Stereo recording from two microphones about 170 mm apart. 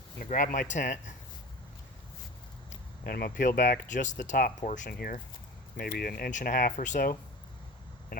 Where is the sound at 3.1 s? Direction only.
65° left (ahead or behind).